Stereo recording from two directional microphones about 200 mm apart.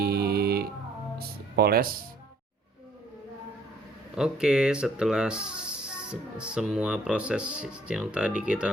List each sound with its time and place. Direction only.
0.0 s music: 50° right (ahead or behind)
1.5 s speech: 50° right (ahead or behind)
4.1 s speech: 5° right (ahead or behind)